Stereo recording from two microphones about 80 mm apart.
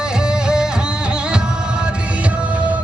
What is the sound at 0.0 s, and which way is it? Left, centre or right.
Music, centre.